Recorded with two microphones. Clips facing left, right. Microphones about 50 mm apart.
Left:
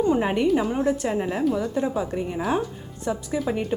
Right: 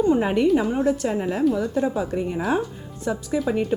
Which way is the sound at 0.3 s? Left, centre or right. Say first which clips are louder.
Right 2 dB; centre.